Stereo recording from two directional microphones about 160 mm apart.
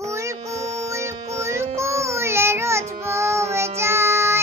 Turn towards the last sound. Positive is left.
turn(degrees=-15)  # may be behind; listen again after turning